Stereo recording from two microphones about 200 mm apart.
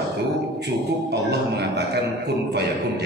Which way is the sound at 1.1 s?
55° right (ahead or behind).